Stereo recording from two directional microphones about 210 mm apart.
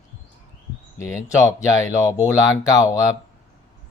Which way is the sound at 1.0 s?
15° left (ahead or behind).